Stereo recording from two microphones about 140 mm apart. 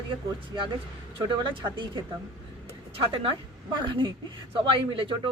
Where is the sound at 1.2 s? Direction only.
35° right (ahead or behind).